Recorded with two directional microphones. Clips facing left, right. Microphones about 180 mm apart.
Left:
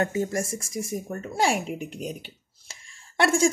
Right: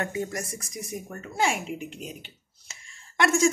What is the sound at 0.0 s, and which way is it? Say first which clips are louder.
Speech: left 5 dB; 30° left (ahead or behind).